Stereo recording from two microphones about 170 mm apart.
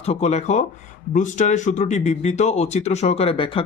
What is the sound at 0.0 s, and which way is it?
Speech, 40° left (ahead or behind).